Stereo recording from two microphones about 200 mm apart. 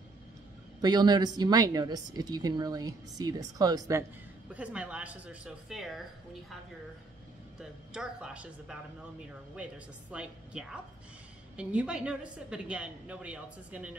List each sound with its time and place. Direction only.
0.7 s a woman's voice: 20° right (ahead or behind)
4.5 s a woman's voice: 5° right (ahead or behind)
7.5 s a woman's voice: 5° right (ahead or behind)
10.1 s a woman's voice: 5° right (ahead or behind)